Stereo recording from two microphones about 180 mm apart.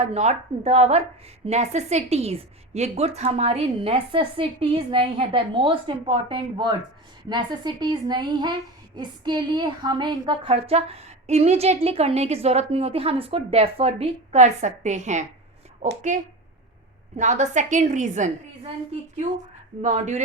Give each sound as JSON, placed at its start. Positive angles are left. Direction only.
{"t": 0.0, "sound": "a woman's voice", "side_deg": -40}
{"t": 19.8, "sound": "a woman's voice", "side_deg": -40}